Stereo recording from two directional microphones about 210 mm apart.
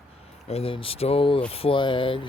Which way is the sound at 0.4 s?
30° left (ahead or behind).